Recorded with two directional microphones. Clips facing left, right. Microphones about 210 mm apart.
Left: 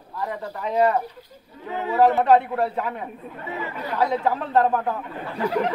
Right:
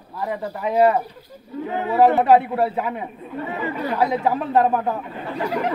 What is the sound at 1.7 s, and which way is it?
Speech, 55° right (ahead or behind).